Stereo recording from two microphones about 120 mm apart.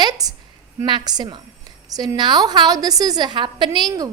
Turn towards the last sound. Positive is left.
turn(degrees=-35)  # may be behind; listen again after turning